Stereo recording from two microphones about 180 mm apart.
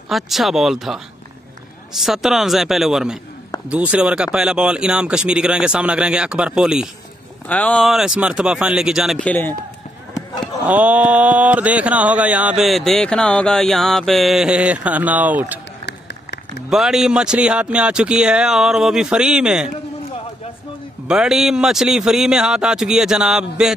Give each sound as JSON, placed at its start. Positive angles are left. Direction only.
{"t": 0.1, "sound": "speech", "side_deg": 0}
{"t": 7.4, "sound": "speech", "side_deg": 10}
{"t": 9.3, "sound": "speech", "side_deg": 10}
{"t": 10.7, "sound": "speech", "side_deg": -10}
{"t": 15.8, "sound": "run", "side_deg": 75}
{"t": 16.6, "sound": "speech", "side_deg": 0}
{"t": 21.1, "sound": "speech", "side_deg": -5}